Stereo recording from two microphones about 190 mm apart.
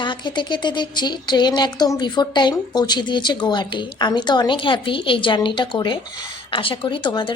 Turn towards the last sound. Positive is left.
turn(degrees=25)  # may be behind; listen again after turning